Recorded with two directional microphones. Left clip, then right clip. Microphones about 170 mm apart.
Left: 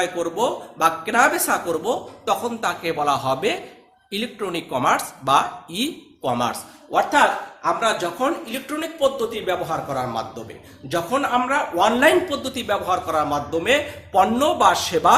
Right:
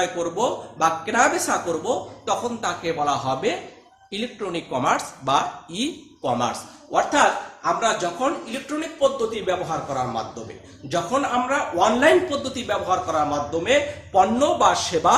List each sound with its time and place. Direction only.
0.0 s a man's voice: 20° left (ahead or behind)